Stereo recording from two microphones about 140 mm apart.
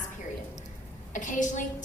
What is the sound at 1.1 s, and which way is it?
Speech, 65° left (ahead or behind).